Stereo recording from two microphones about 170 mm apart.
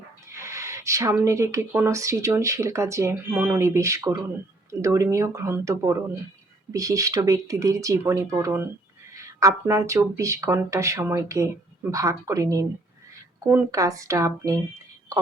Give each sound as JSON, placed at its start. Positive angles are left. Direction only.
{"t": 0.3, "sound": "speech", "side_deg": -15}